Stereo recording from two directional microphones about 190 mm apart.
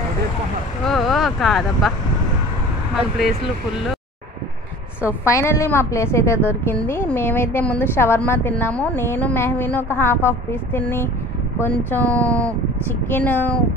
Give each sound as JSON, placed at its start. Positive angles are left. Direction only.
{"t": 0.8, "sound": "speech", "side_deg": 0}
{"t": 3.2, "sound": "speech", "side_deg": 0}
{"t": 5.0, "sound": "a woman's voice", "side_deg": 15}